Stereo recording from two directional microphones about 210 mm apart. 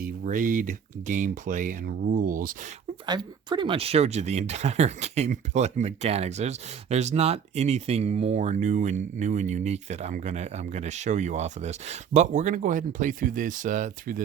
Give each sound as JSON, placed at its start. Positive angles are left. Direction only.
{"t": 0.0, "sound": "speech", "side_deg": -40}
{"t": 3.1, "sound": "speech", "side_deg": -20}